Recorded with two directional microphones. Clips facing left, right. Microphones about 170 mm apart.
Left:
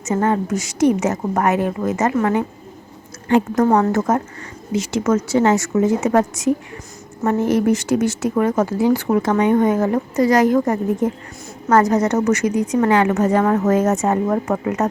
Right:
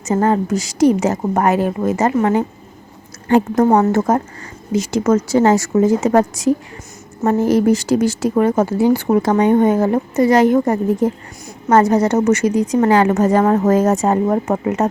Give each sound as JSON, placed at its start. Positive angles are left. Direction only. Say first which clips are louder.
{"t": 0.0, "sound": "a woman's voice", "louder": "right 3 dB", "side_deg": -35}